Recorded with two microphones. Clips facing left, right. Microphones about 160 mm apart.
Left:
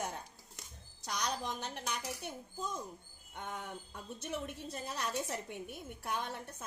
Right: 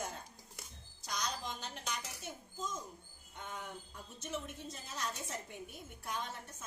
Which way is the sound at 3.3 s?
60° left (ahead or behind).